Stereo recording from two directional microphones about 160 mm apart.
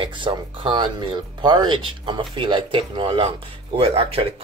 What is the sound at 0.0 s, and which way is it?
Speech, 30° right (ahead or behind).